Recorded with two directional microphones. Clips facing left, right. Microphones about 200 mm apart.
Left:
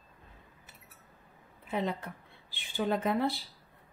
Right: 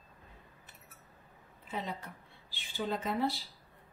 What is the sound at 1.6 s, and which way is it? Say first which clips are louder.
A woman's voice: left 6 dB; 60° left (ahead or behind).